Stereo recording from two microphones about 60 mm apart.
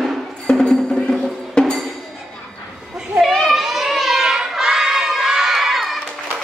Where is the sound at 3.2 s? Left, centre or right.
Centre.